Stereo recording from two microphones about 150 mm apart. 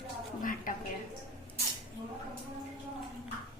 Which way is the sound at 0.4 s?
65° left (ahead or behind).